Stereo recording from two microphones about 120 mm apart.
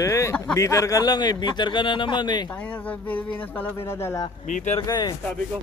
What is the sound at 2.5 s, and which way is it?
Speech, 15° left (ahead or behind).